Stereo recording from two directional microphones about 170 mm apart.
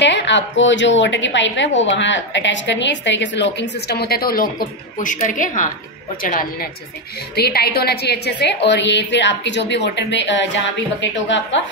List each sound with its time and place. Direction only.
0.0 s a woman's voice: 90° left; by 4.5 s 60° left (ahead or behind)
4.9 s a woman's voice: 50° left (ahead or behind)
7.3 s a woman's voice: 70° left (ahead or behind); by 11.6 s 90° left